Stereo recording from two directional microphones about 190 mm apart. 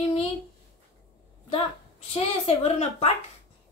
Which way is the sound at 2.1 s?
30° left (ahead or behind).